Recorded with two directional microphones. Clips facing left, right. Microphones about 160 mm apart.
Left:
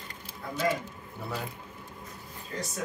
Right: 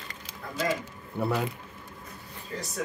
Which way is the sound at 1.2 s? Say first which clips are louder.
Right 9 dB; 65° right (ahead or behind).